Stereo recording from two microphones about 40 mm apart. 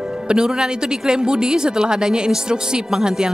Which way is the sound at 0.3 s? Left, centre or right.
Centre.